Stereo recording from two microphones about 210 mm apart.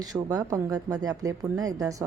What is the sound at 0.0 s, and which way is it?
A woman's voice, 20° right (ahead or behind).